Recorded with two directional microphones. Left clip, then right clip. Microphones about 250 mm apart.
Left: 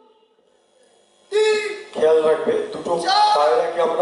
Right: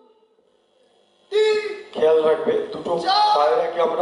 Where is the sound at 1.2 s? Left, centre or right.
Centre.